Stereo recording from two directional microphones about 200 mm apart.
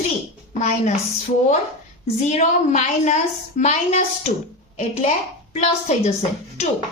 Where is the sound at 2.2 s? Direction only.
35° left (ahead or behind).